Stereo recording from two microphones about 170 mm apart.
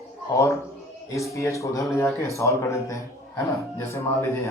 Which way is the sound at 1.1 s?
15° left (ahead or behind).